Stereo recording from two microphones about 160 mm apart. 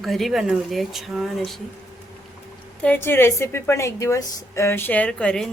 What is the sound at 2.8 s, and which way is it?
A woman's voice, 10° left (ahead or behind).